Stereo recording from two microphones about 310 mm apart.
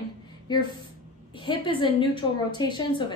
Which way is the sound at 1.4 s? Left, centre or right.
Centre.